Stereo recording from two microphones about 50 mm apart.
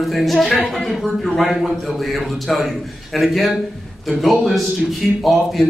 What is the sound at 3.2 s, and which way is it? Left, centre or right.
A man's voice, centre.